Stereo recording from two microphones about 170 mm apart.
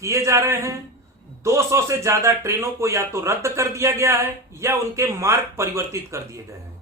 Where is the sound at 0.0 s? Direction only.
20° right (ahead or behind).